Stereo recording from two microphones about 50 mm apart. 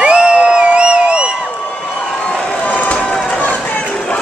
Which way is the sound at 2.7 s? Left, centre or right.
Left.